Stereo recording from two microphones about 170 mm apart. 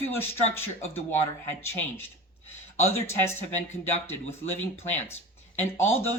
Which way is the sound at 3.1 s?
15° left (ahead or behind).